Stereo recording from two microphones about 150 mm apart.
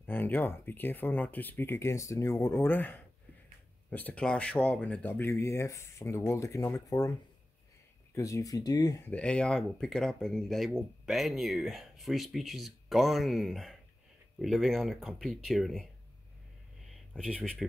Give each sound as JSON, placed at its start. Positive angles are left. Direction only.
{"t": 0.0, "sound": "speech", "side_deg": 15}
{"t": 9.0, "sound": "speech", "side_deg": 10}
{"t": 17.1, "sound": "speech", "side_deg": 5}